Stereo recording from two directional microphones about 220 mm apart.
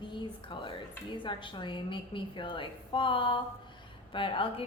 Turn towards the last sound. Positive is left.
turn(degrees=25)  # may be behind; listen again after turning